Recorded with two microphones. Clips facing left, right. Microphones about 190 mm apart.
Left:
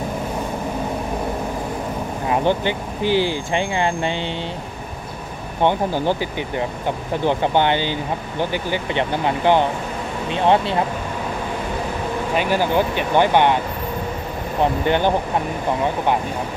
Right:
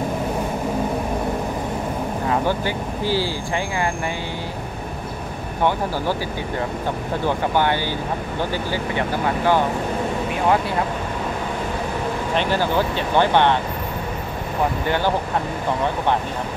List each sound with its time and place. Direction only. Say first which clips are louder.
2.2 s speech: left 3 dB; 20° left (ahead or behind)
5.6 s speech: left 3 dB; 20° left (ahead or behind)
7.2 s speech: left 3 dB; 20° left (ahead or behind)
12.4 s speech: left 2 dB; 15° left (ahead or behind)
14.9 s speech: left 3 dB; 20° left (ahead or behind)